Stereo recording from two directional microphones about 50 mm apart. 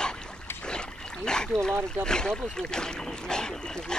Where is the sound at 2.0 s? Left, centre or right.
Centre.